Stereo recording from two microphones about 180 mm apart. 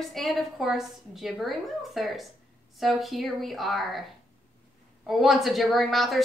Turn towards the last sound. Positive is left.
turn(degrees=0)  # may be behind; listen again after turning